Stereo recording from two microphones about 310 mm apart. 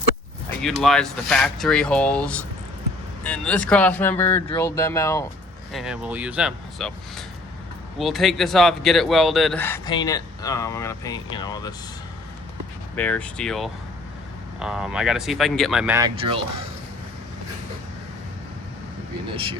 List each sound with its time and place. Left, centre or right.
0.6 s speech: centre
5.7 s speech: centre
13.0 s speech: centre
19.3 s speech: centre